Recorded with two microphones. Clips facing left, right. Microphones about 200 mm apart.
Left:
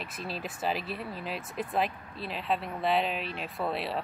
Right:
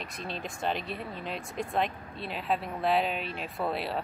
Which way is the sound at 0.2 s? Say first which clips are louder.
Even; 5° left (ahead or behind).